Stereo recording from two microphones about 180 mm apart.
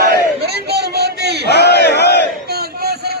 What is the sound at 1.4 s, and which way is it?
Battle cry, 65° left (ahead or behind).